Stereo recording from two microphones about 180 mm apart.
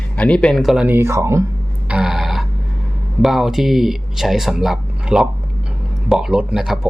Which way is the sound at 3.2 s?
Centre (ahead or behind).